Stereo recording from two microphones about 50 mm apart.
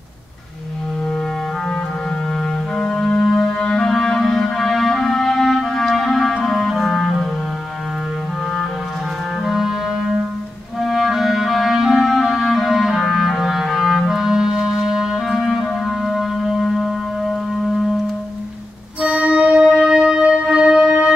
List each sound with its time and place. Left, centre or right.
2.8 s music: centre
6.4 s clarinet: centre
9.4 s clarinet: centre
16.7 s music: centre
18.9 s music: right